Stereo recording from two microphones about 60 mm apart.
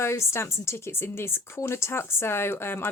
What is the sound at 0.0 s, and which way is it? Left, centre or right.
A woman's voice, left.